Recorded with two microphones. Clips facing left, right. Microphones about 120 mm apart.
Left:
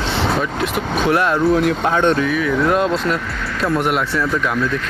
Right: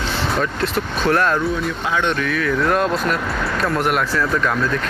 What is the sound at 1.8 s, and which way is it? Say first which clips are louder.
Speech: left 5 dB; 45° left (ahead or behind).